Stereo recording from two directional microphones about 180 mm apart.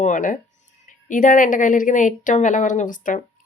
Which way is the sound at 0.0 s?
45° left (ahead or behind).